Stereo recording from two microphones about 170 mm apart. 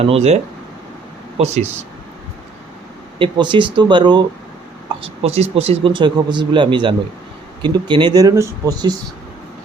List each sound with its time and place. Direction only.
0.0 s speech: 40° right (ahead or behind)
1.4 s speech: 40° right (ahead or behind)
3.2 s speech: 30° right (ahead or behind)
5.0 s speech: 40° right (ahead or behind); by 9.0 s 20° right (ahead or behind)